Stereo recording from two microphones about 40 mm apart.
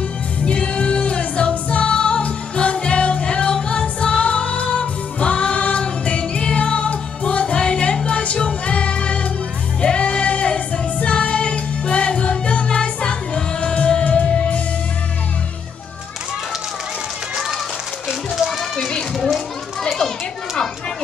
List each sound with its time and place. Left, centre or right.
0.5 s music: left
18.3 s children playing: centre